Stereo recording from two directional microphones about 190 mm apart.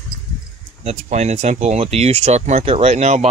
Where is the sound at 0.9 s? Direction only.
35° right (ahead or behind).